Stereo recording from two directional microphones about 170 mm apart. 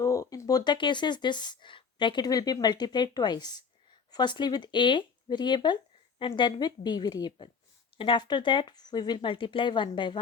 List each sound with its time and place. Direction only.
0.0 s speech: 20° left (ahead or behind)